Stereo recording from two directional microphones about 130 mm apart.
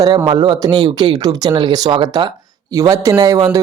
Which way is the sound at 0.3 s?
35° right (ahead or behind).